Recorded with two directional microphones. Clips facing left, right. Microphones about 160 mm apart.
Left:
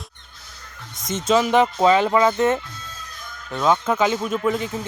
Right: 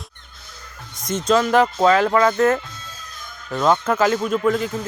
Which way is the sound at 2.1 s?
20° left (ahead or behind).